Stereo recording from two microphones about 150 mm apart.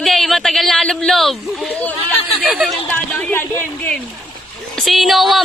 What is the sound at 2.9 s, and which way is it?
Speech, 15° left (ahead or behind).